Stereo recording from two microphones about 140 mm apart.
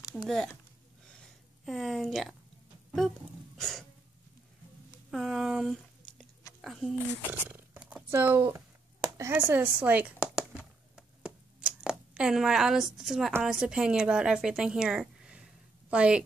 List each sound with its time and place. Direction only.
0.1 s speech: centre (ahead or behind)
1.7 s speech: centre (ahead or behind)
3.5 s a sound: 5° left (ahead or behind)
5.1 s speech: centre (ahead or behind)
7.4 s purr: 15° right (ahead or behind)
9.2 s a sound: 15° right (ahead or behind)
13.4 s a woman's voice: 5° right (ahead or behind)